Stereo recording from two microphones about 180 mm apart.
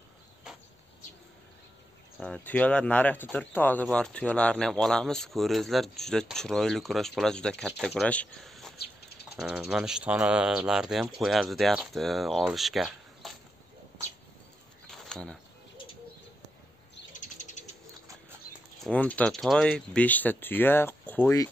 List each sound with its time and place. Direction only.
2.1 s speech: 5° left (ahead or behind)
14.9 s bird: 5° left (ahead or behind)
17.2 s bird: 40° left (ahead or behind)
18.9 s speech: 10° left (ahead or behind)